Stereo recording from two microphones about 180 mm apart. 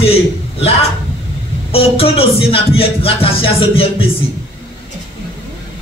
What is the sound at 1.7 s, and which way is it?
Music, 30° left (ahead or behind).